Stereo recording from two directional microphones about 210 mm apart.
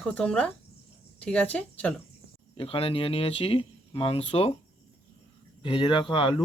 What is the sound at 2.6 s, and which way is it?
Speech, 25° left (ahead or behind).